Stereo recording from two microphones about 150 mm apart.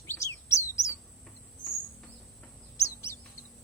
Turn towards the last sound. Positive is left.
turn(degrees=20)  # may be behind; listen again after turning